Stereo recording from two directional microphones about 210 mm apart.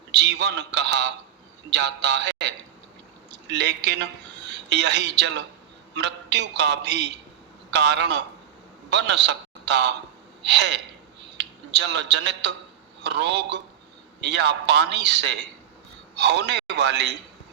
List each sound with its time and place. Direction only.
0.1 s a man's voice: 55° right (ahead or behind)
3.3 s a man's voice: 55° right (ahead or behind)